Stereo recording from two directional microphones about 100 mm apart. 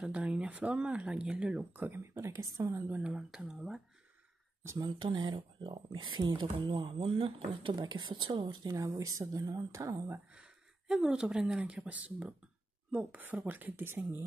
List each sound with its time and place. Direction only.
0.1 s speech: 10° right (ahead or behind); by 2.8 s 30° right (ahead or behind)
2.9 s speech: 10° right (ahead or behind)
4.6 s speech: 40° right (ahead or behind)
4.9 s speech: 50° right (ahead or behind); by 7.7 s 65° right (ahead or behind)
7.7 s speech: 45° right (ahead or behind)
8.7 s speech: 35° right (ahead or behind)
10.3 s speech: 10° right (ahead or behind)